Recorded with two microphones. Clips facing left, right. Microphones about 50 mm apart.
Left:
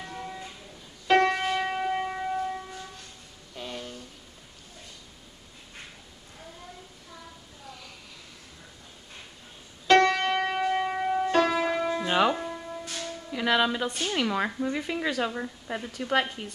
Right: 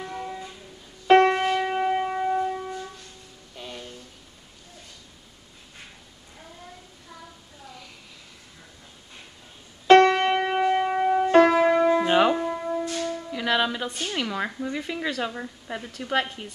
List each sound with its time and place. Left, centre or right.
0.0 s music: centre
1.0 s music: right
1.7 s church bell: centre
3.5 s a sound: centre
9.8 s music: right
12.1 s music: centre
12.4 s church bell: right
13.3 s a woman's voice: centre